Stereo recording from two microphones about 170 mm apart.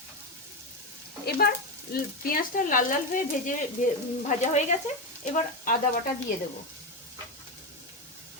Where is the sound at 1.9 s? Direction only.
60° left (ahead or behind).